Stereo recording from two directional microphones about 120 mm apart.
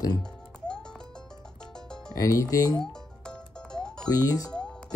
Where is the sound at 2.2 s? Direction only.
30° left (ahead or behind).